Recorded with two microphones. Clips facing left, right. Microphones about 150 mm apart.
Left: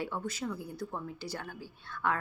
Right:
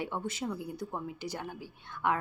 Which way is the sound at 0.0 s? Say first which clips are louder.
Right 1 dB; 20° right (ahead or behind).